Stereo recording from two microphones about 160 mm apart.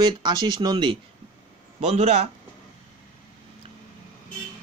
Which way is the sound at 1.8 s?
40° right (ahead or behind).